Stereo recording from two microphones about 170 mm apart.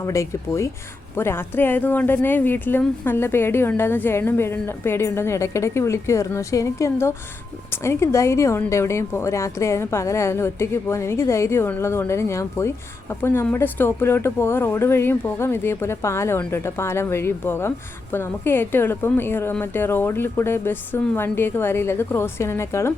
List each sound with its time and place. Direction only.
0.0 s a woman's voice: 15° left (ahead or behind)